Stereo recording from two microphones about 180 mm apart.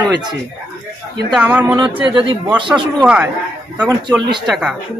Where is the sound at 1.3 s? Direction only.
10° right (ahead or behind).